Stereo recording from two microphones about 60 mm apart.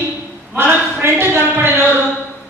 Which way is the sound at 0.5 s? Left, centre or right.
Right.